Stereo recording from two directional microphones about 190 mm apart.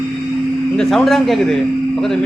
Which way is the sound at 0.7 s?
5° left (ahead or behind).